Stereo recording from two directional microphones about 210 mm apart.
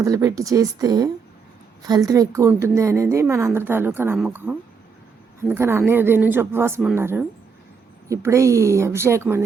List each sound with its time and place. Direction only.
0.0 s a woman's voice: 15° right (ahead or behind)